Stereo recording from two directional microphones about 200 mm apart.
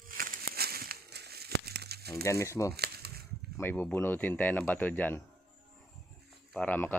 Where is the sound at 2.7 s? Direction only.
50° right (ahead or behind).